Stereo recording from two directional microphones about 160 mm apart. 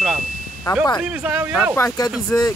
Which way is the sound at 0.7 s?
25° left (ahead or behind).